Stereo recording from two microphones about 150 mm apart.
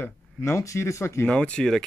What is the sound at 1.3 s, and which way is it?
Speech, 5° left (ahead or behind).